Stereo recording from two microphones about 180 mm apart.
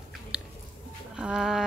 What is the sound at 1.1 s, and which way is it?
Bird, 5° right (ahead or behind).